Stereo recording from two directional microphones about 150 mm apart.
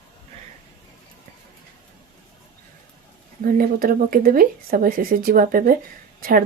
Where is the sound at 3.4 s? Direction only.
70° right (ahead or behind).